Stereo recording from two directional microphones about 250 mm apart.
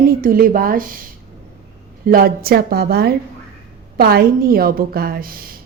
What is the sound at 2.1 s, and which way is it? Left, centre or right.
A woman's voice, right.